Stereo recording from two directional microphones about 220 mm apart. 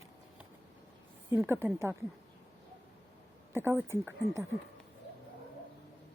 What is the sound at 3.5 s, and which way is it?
Speech, 10° right (ahead or behind).